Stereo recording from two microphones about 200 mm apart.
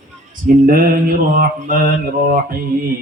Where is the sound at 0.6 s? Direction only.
45° right (ahead or behind).